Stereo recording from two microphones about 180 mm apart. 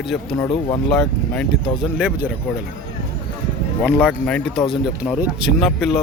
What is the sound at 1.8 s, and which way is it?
Speech, 5° right (ahead or behind).